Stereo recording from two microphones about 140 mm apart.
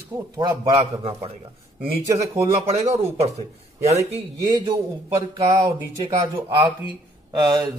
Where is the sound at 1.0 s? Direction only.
40° right (ahead or behind).